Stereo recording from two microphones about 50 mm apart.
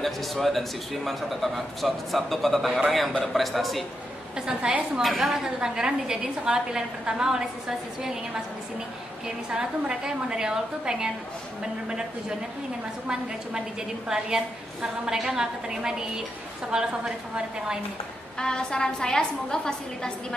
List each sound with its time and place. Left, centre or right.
0.0 s a man's voice: centre
4.5 s a woman's voice: right
9.5 s a woman's voice: centre
14.0 s a woman's voice: centre
18.4 s a woman's voice: centre